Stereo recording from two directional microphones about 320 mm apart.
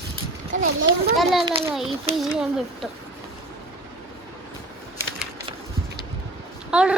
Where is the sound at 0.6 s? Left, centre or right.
Right.